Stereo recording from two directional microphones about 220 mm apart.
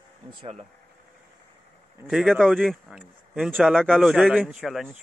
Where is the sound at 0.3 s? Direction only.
25° right (ahead or behind).